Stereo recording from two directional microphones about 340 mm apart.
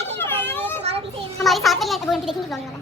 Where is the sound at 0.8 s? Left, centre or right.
Centre.